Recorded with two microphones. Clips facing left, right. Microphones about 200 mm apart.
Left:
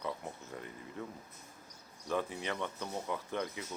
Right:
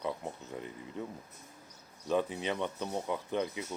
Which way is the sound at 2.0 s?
20° right (ahead or behind).